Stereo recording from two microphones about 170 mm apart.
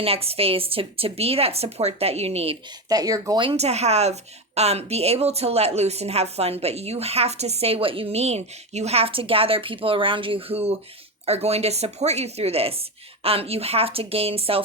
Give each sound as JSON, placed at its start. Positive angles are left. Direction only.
{"t": 0.0, "sound": "speech", "side_deg": -35}
{"t": 2.9, "sound": "speech", "side_deg": -20}